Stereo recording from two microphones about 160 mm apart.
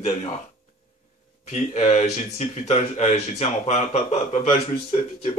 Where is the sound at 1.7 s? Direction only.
45° left (ahead or behind).